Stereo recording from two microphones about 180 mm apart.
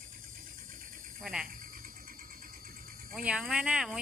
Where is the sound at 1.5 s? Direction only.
50° right (ahead or behind).